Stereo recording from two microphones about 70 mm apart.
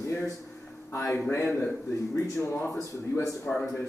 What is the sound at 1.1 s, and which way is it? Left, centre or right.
Speech, left.